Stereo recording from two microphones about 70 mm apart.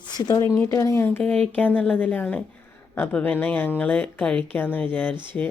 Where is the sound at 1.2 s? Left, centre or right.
Centre.